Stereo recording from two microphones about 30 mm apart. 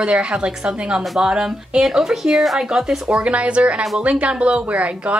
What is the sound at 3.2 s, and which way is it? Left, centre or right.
A woman's voice, right.